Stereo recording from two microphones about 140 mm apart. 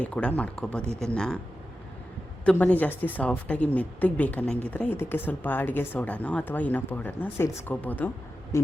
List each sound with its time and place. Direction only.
0.0 s a woman's voice: 10° left (ahead or behind)
2.4 s a woman's voice: 10° left (ahead or behind)